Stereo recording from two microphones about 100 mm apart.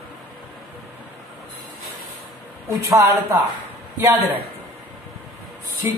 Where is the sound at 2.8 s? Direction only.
30° right (ahead or behind).